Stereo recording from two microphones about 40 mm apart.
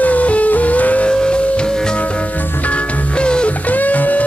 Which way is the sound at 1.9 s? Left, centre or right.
Left.